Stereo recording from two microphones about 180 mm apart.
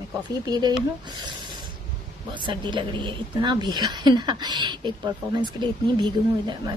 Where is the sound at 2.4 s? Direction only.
25° right (ahead or behind).